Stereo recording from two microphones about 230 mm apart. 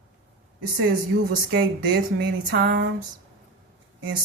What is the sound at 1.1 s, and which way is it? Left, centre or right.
Speech, right.